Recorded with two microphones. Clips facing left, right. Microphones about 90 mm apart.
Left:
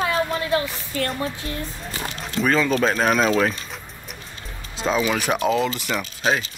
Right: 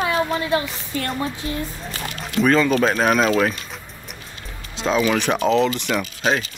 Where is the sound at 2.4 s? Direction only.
Centre (ahead or behind).